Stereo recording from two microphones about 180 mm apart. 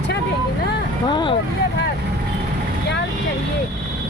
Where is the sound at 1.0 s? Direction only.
25° left (ahead or behind).